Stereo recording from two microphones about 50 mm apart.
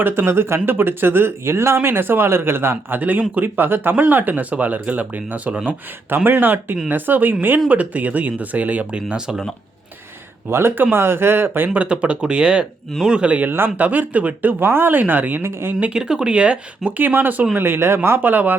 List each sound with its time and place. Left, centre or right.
0.3 s speech: right
3.0 s speech: right
6.1 s speech: right
9.0 s speech: centre
10.5 s speech: right
11.7 s speech: right
14.6 s speech: right
15.4 s speech: right
15.9 s speech: centre
17.0 s speech: right
17.5 s speech: right
18.2 s speech: right